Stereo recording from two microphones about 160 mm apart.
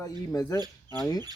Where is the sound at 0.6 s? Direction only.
25° right (ahead or behind).